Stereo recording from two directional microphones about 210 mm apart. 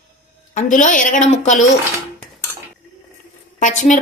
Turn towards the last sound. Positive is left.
turn(degrees=35)  # may be behind; listen again after turning